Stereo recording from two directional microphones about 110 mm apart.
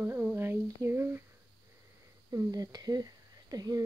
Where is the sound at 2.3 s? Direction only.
30° right (ahead or behind).